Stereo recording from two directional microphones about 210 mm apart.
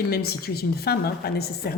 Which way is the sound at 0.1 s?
50° left (ahead or behind).